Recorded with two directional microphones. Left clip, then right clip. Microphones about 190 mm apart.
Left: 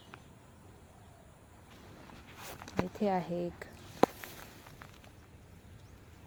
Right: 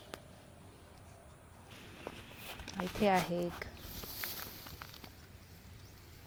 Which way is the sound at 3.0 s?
Centre (ahead or behind).